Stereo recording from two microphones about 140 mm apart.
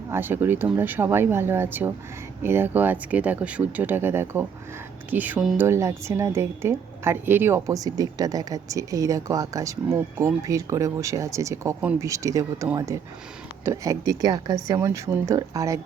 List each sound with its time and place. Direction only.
0.1 s speech: 15° right (ahead or behind)
5.5 s a woman's voice: 20° right (ahead or behind)